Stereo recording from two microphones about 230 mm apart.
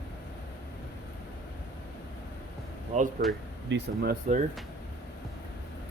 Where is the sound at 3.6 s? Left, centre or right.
Right.